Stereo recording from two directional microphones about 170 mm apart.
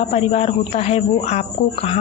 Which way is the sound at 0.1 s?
40° left (ahead or behind).